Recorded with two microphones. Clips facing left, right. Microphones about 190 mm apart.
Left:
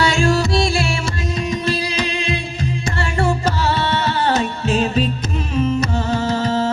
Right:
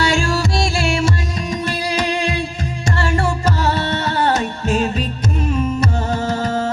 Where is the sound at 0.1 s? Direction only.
45° right (ahead or behind).